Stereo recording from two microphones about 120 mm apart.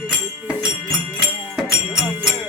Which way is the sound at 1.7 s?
5° right (ahead or behind).